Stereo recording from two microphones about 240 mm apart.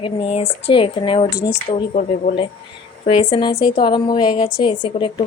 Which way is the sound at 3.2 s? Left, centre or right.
Left.